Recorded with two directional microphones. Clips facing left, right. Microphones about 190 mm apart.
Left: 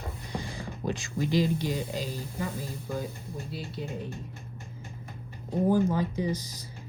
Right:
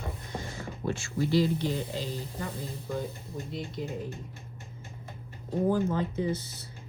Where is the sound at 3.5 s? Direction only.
5° left (ahead or behind).